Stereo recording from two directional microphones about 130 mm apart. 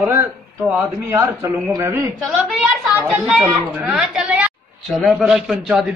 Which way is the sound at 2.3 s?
Centre (ahead or behind).